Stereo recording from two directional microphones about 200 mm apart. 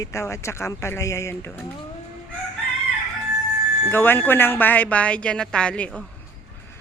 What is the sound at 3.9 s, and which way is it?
A woman's voice, 10° left (ahead or behind).